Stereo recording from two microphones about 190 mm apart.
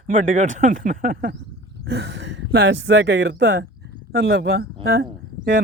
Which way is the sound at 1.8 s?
65° right (ahead or behind).